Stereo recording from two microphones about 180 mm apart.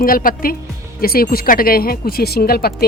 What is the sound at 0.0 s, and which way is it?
A woman's voice, 50° left (ahead or behind).